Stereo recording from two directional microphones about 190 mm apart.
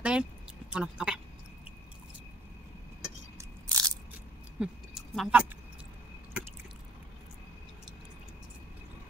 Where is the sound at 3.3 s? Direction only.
20° right (ahead or behind).